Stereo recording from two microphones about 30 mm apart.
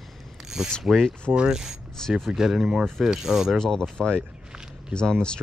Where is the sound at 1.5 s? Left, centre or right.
Centre.